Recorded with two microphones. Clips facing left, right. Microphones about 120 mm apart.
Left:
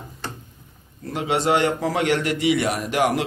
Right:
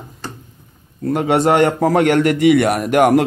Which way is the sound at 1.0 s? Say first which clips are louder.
Right 8 dB; 55° right (ahead or behind).